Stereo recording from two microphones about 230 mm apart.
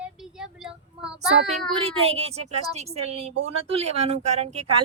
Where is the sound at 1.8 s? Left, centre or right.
Right.